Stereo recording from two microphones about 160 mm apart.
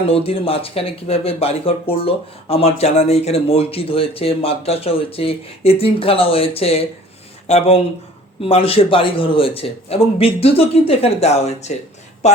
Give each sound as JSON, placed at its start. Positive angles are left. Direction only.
{"t": 0.1, "sound": "speech", "side_deg": 35}